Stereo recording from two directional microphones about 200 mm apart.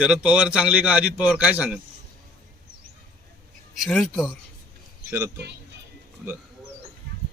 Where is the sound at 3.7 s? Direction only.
Centre (ahead or behind).